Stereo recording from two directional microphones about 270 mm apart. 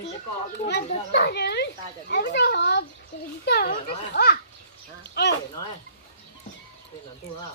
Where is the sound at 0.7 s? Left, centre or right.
Left.